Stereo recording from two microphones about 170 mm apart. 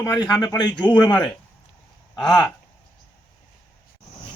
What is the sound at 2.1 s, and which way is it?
Speech, 25° left (ahead or behind).